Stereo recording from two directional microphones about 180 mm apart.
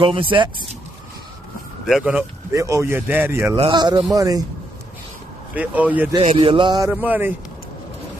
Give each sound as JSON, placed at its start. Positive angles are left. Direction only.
{"t": 0.0, "sound": "speech", "side_deg": -30}
{"t": 1.9, "sound": "speech", "side_deg": -5}
{"t": 2.5, "sound": "speech", "side_deg": -15}
{"t": 3.5, "sound": "speech", "side_deg": -25}
{"t": 5.5, "sound": "speech", "side_deg": -10}
{"t": 6.2, "sound": "speech", "side_deg": -30}
{"t": 6.9, "sound": "speech", "side_deg": -10}